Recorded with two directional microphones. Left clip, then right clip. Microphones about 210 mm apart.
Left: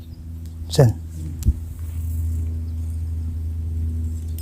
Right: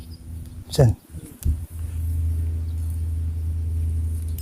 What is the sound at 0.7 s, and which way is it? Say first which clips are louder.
Speech: left 3 dB; 10° left (ahead or behind).